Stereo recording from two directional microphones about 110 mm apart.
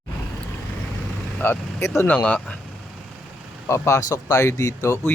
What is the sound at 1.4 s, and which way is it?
Speech, 20° left (ahead or behind).